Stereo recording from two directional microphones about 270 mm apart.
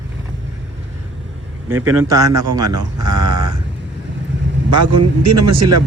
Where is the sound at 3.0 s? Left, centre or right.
Right.